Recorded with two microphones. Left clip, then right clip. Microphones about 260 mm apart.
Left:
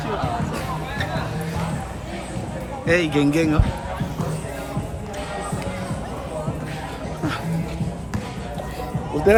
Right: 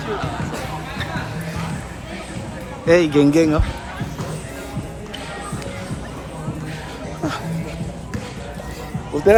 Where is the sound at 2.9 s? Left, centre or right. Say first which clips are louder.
Right 5 dB; centre.